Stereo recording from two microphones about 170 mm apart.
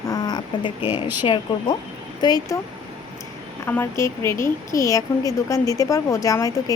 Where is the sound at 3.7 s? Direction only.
15° left (ahead or behind).